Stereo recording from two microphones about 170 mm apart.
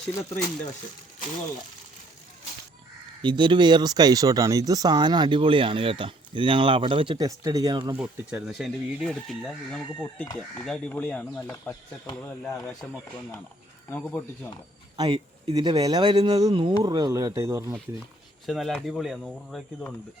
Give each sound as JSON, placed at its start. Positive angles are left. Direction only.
{"t": 0.2, "sound": "speech", "side_deg": 15}
{"t": 3.2, "sound": "speech", "side_deg": -25}
{"t": 7.9, "sound": "speech", "side_deg": -5}
{"t": 12.1, "sound": "speech", "side_deg": 5}
{"t": 14.9, "sound": "speech", "side_deg": -25}
{"t": 18.4, "sound": "speech", "side_deg": 0}